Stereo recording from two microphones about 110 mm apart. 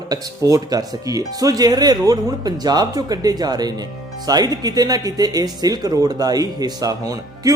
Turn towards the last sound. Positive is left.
turn(degrees=-35)  # may be behind; listen again after turning